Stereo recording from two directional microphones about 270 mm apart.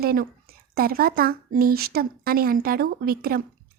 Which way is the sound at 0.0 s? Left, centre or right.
Right.